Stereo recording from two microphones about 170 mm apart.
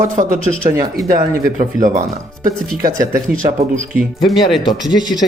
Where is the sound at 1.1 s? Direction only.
50° right (ahead or behind).